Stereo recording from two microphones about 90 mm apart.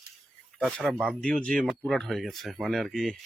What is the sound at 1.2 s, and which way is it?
Speech, 10° left (ahead or behind).